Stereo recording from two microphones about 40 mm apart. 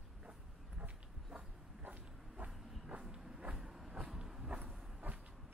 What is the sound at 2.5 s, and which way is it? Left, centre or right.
Train, centre.